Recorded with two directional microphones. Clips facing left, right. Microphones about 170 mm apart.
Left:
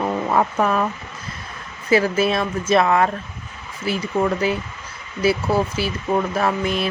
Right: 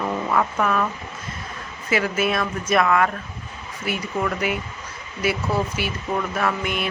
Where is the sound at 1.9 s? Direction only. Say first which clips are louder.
Left 4 dB; 35° left (ahead or behind).